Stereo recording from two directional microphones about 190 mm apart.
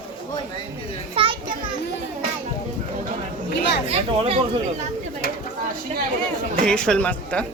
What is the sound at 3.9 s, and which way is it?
Speech, 35° right (ahead or behind).